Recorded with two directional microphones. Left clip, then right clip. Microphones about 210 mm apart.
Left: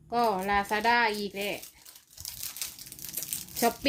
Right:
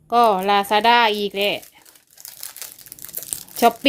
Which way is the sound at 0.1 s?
35° right (ahead or behind).